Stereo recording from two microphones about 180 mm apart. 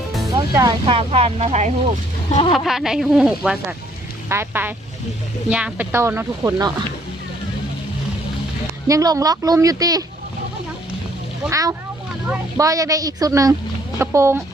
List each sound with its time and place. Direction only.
0.5 s speech: 20° right (ahead or behind); by 1.7 s 35° right (ahead or behind)
2.5 s speech: centre (ahead or behind); by 6.7 s 20° right (ahead or behind)
8.9 s speech: 20° right (ahead or behind)
11.5 s speech: 15° right (ahead or behind)